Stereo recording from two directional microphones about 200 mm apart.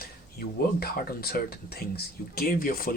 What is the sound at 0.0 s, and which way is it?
Speech, 50° left (ahead or behind).